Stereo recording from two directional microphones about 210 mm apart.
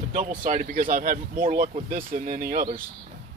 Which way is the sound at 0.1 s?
40° right (ahead or behind).